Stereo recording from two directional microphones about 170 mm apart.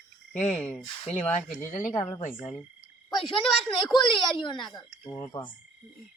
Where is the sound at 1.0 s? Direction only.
45° left (ahead or behind).